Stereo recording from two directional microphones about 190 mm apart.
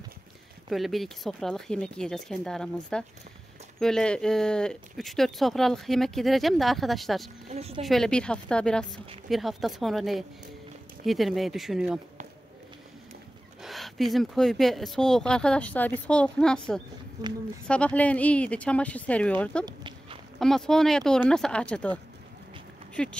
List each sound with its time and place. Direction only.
0.7 s speech: centre (ahead or behind)
7.4 s speech: 35° right (ahead or behind)
7.8 s speech: centre (ahead or behind)
13.6 s speech: centre (ahead or behind)
17.2 s speech: 20° right (ahead or behind)
17.6 s speech: 5° left (ahead or behind)
19.6 s walk: 25° right (ahead or behind)
20.3 s speech: centre (ahead or behind)